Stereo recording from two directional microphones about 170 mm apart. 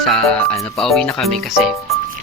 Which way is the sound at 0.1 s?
Centre (ahead or behind).